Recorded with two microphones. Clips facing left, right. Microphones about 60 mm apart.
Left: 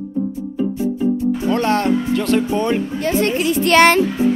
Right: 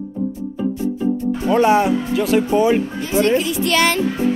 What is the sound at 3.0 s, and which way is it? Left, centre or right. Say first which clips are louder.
A woman's voice: right 1 dB; left.